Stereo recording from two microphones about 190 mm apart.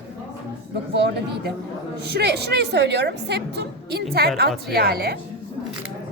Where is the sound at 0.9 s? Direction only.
65° right (ahead or behind).